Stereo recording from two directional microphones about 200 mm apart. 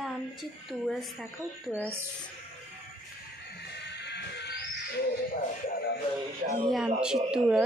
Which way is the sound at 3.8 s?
60° left (ahead or behind).